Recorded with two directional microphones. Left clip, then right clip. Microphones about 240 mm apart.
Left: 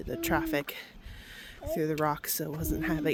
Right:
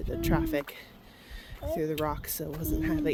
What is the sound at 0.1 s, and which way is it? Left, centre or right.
Speech, left.